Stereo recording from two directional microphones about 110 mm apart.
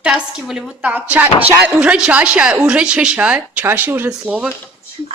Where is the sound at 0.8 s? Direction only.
15° right (ahead or behind).